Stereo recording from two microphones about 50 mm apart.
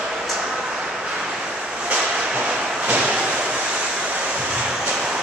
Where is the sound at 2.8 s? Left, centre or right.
Right.